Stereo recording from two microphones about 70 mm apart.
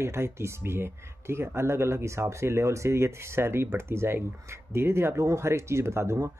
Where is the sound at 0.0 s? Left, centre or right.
Right.